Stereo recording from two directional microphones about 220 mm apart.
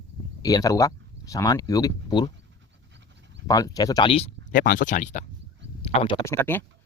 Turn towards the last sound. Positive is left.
turn(degrees=10)  # may be behind; listen again after turning